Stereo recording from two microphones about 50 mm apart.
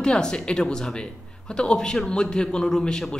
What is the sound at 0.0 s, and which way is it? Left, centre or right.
Speech, centre.